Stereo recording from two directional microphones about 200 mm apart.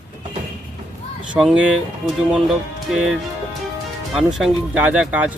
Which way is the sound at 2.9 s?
Centre (ahead or behind).